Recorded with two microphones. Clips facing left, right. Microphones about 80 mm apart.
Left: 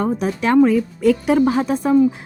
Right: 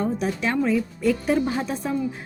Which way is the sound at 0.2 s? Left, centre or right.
Left.